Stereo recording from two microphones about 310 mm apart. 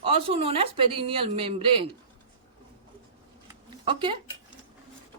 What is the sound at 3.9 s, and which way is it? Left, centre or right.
Speech, centre.